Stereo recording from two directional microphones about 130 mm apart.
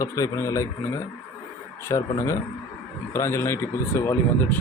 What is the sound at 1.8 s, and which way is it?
Speech, 25° left (ahead or behind).